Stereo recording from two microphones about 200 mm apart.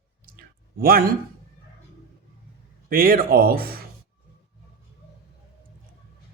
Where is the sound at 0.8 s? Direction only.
50° right (ahead or behind).